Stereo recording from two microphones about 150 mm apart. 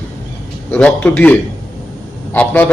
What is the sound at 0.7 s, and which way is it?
A man's voice, 10° left (ahead or behind).